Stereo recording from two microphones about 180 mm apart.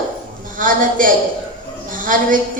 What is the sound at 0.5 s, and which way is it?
A woman's voice, 50° right (ahead or behind).